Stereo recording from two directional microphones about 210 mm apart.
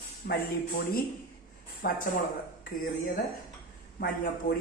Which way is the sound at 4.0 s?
50° left (ahead or behind).